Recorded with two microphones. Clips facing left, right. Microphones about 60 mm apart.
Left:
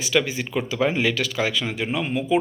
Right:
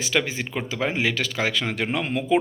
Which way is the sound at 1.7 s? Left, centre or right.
Right.